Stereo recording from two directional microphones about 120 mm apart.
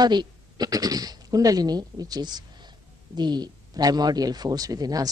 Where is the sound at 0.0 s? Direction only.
35° right (ahead or behind).